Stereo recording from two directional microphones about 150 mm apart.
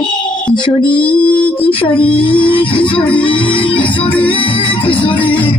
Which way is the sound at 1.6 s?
35° left (ahead or behind).